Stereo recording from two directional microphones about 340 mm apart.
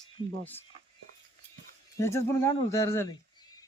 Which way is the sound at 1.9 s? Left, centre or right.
Centre.